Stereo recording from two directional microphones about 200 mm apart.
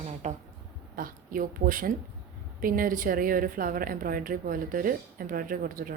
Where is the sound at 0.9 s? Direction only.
45° right (ahead or behind).